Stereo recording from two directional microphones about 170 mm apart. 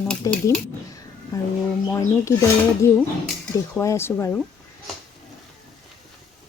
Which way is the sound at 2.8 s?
15° left (ahead or behind).